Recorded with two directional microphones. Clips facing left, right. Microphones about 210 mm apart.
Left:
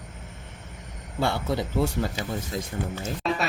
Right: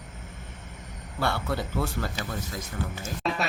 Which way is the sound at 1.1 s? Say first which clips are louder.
Left 3 dB; 20° left (ahead or behind).